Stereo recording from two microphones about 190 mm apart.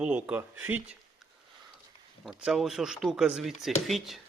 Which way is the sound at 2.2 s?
Centre (ahead or behind).